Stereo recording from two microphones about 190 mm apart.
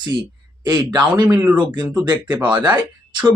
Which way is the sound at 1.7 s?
20° right (ahead or behind).